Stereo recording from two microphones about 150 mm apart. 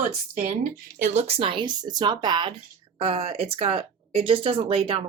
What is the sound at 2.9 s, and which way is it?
Speech, 40° right (ahead or behind).